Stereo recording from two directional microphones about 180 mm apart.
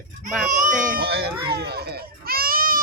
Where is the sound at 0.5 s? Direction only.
45° right (ahead or behind).